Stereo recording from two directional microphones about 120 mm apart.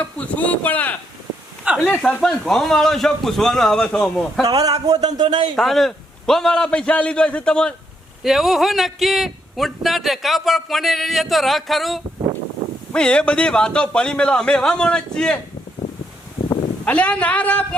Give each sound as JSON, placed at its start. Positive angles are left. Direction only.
{"t": 0.0, "sound": "a man's voice", "side_deg": 10}
{"t": 4.4, "sound": "speech", "side_deg": -30}
{"t": 5.5, "sound": "a man's voice", "side_deg": 0}
{"t": 16.8, "sound": "a man's voice", "side_deg": 10}